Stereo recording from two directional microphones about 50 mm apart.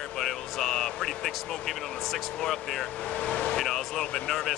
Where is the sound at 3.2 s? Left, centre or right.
Left.